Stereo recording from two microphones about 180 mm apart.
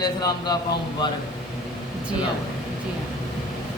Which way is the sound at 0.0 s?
20° left (ahead or behind).